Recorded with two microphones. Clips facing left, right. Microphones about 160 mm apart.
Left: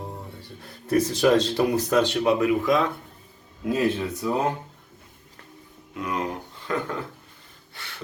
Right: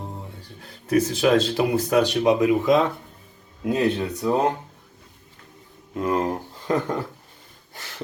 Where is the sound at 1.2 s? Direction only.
5° right (ahead or behind); by 2.9 s 25° right (ahead or behind).